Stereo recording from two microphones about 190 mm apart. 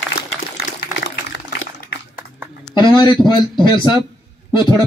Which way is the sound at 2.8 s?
25° left (ahead or behind).